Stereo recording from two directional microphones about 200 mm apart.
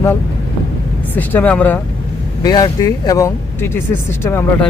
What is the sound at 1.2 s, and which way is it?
Speech, 10° left (ahead or behind).